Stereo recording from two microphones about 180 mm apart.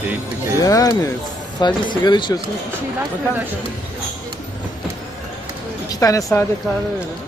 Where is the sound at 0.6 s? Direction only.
20° left (ahead or behind).